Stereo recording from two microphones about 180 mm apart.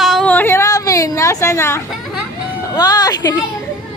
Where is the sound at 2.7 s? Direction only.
20° left (ahead or behind).